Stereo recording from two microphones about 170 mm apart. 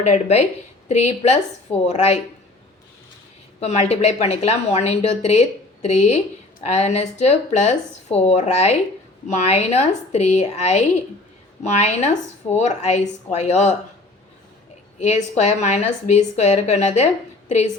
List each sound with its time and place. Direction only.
0.0 s a woman's voice: 40° left (ahead or behind)
3.6 s a woman's voice: 40° left (ahead or behind)
14.9 s a woman's voice: 40° left (ahead or behind)